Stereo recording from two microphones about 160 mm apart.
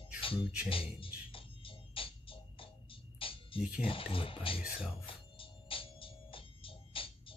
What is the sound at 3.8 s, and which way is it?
Speech, 35° left (ahead or behind).